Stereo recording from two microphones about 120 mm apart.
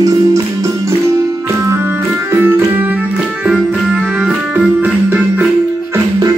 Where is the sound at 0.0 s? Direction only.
30° right (ahead or behind).